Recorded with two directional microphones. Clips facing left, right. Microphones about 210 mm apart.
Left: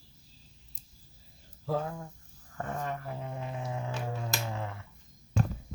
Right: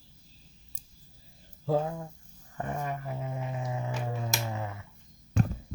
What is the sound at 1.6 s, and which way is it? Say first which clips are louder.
Speech: right 4 dB; 25° right (ahead or behind).